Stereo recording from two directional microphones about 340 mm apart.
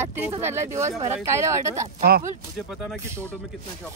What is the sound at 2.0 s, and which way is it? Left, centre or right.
Speech, right.